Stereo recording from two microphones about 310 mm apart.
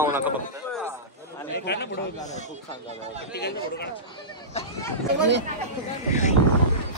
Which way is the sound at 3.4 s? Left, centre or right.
Left.